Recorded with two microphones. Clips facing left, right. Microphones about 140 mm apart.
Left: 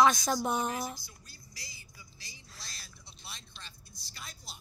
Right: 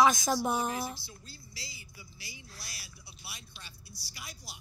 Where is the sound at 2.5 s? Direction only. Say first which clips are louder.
Right 1 dB; 5° right (ahead or behind).